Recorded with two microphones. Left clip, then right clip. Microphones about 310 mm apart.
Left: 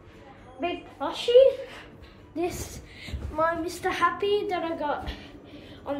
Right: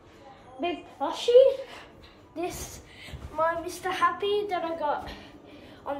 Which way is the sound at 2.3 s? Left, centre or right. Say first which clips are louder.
Left 3 dB; centre.